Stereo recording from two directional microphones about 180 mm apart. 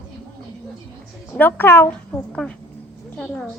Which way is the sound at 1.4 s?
10° left (ahead or behind).